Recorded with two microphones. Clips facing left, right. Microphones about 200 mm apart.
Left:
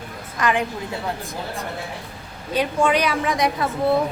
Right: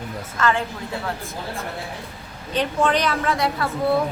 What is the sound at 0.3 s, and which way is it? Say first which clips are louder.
A woman's voice: left 1 dB; 15° left (ahead or behind).